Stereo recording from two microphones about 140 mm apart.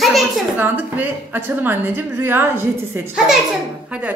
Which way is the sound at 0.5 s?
10° right (ahead or behind).